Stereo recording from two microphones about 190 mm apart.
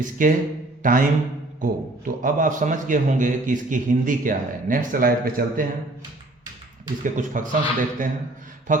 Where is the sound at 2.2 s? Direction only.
45° right (ahead or behind).